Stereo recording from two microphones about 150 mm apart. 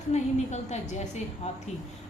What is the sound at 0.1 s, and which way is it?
A woman's voice, 50° left (ahead or behind).